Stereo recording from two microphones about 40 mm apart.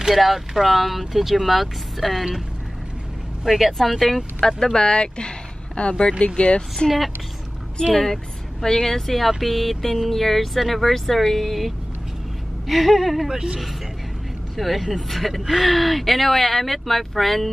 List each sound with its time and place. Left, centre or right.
0.0 s speech: centre
3.4 s speech: centre
4.7 s speech: left
7.9 s speech: centre
14.6 s speech: centre